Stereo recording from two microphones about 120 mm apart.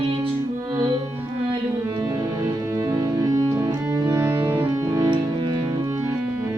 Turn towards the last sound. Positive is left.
turn(degrees=-25)  # may be behind; listen again after turning